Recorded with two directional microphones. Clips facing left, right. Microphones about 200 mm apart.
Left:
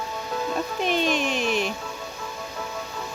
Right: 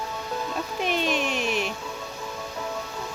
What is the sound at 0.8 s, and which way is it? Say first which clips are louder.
Music: left 1 dB; 5° right (ahead or behind).